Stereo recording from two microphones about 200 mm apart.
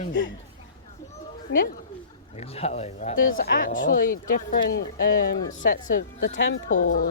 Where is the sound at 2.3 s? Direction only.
30° left (ahead or behind).